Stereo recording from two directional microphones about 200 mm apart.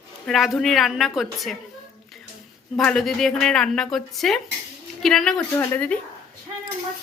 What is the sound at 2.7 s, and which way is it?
Speech, centre (ahead or behind).